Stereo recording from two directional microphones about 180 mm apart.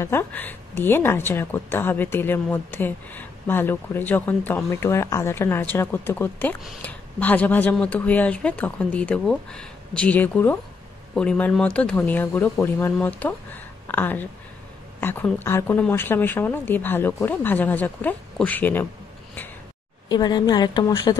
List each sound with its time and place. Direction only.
0.0 s a woman's voice: 15° left (ahead or behind)
20.1 s a woman's voice: 25° left (ahead or behind)